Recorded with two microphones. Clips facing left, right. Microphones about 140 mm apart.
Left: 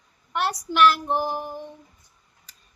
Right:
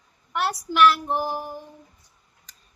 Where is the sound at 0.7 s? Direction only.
Centre (ahead or behind).